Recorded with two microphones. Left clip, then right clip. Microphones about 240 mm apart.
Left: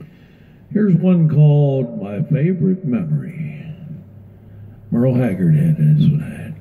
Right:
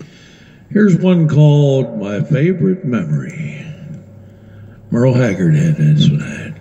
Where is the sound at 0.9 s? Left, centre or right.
Right.